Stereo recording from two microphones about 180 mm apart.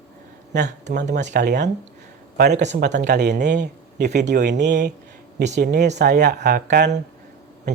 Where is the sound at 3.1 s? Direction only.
70° right (ahead or behind).